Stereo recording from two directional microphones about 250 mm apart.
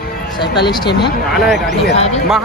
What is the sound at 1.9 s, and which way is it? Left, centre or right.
Speech, left.